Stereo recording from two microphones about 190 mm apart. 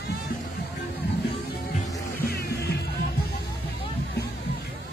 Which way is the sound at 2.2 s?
55° left (ahead or behind).